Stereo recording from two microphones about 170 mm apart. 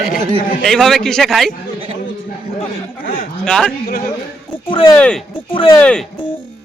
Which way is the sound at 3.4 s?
5° left (ahead or behind).